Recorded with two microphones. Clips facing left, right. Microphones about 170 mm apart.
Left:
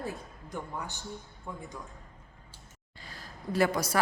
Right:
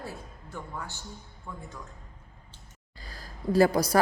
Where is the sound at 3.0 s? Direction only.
40° right (ahead or behind).